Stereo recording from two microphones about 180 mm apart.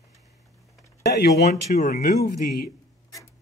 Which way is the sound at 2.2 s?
60° left (ahead or behind).